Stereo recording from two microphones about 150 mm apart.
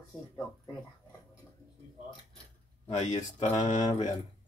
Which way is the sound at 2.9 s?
50° left (ahead or behind).